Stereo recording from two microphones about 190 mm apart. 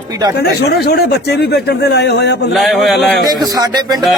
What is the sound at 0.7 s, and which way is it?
A man's voice, 60° left (ahead or behind).